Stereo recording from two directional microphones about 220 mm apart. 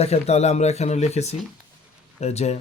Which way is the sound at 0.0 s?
30° left (ahead or behind).